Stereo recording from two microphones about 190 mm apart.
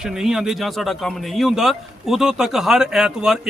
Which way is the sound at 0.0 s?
Centre (ahead or behind).